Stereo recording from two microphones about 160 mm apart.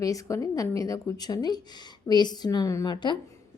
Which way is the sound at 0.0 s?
20° left (ahead or behind).